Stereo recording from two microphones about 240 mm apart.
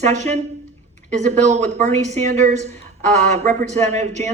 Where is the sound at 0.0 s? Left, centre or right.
Right.